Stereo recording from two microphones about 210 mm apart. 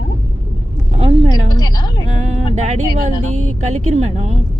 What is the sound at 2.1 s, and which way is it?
Speech, 35° right (ahead or behind).